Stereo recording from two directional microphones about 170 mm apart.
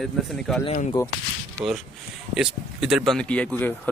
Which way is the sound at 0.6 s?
35° left (ahead or behind).